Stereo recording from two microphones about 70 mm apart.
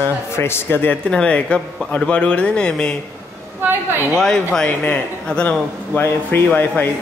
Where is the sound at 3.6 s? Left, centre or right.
Right.